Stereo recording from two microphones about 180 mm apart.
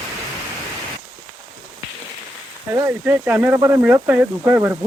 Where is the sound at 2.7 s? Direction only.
10° right (ahead or behind).